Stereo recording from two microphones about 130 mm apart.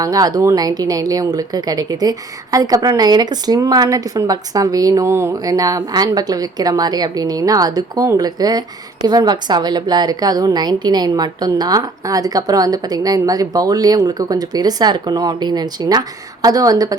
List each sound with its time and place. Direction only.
0.0 s a woman's voice: 30° right (ahead or behind)